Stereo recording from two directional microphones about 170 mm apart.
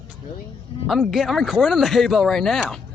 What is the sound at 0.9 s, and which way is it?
Speech, centre (ahead or behind).